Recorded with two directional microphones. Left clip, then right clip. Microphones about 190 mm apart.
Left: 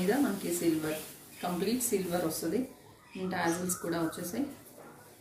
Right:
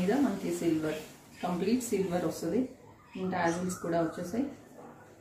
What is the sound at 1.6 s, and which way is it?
Speech, centre (ahead or behind).